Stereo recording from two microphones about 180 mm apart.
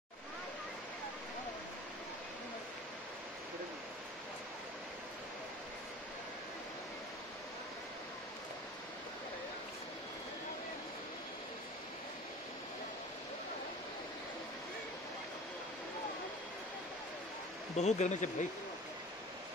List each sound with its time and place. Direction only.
17.7 s speech: 40° left (ahead or behind)